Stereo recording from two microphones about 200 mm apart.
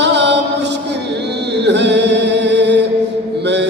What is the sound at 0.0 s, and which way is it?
Mantra, 60° right (ahead or behind).